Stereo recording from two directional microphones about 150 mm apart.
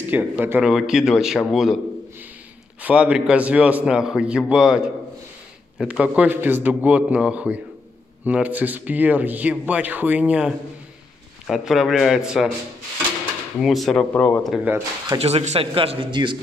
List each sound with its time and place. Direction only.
0.1 s speech: 10° right (ahead or behind)
2.8 s speech: 10° right (ahead or behind)
13.6 s speech: centre (ahead or behind)
14.5 s speech: 10° right (ahead or behind)
15.1 s speech: 45° right (ahead or behind)